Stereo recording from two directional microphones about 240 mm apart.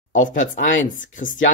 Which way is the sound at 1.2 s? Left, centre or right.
Left.